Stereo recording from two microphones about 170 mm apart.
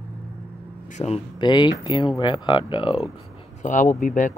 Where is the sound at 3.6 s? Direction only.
50° left (ahead or behind).